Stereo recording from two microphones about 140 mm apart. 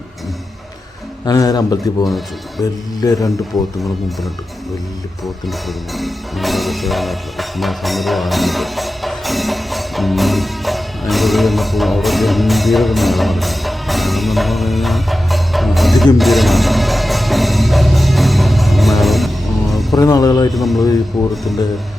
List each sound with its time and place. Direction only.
1.2 s a man's voice: 25° left (ahead or behind)
5.5 s music: centre (ahead or behind)
20.0 s a man's voice: 25° left (ahead or behind)
20.5 s speech: centre (ahead or behind)
20.8 s a man's voice: 25° left (ahead or behind)